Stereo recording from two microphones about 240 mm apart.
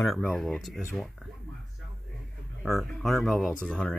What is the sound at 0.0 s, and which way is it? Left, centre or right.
Speech, centre.